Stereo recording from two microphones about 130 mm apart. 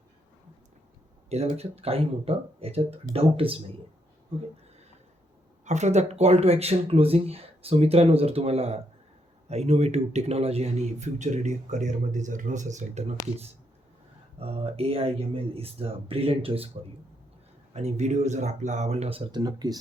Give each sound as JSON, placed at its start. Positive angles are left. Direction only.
{"t": 1.3, "sound": "speech", "side_deg": -55}
{"t": 5.6, "sound": "speech", "side_deg": -60}
{"t": 14.3, "sound": "speech", "side_deg": -50}
{"t": 17.7, "sound": "speech", "side_deg": -60}